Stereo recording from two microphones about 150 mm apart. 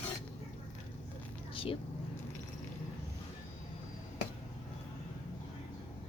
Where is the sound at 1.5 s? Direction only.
35° left (ahead or behind).